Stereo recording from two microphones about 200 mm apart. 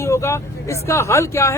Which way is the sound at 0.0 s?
15° left (ahead or behind).